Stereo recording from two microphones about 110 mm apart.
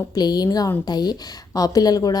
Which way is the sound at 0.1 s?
40° left (ahead or behind).